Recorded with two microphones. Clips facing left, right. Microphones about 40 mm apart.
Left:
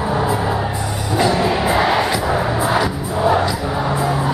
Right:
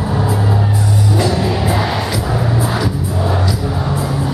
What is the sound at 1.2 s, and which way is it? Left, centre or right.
Music, centre.